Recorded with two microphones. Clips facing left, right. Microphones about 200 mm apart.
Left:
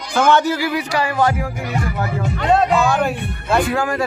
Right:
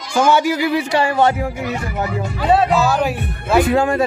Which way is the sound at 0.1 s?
10° right (ahead or behind).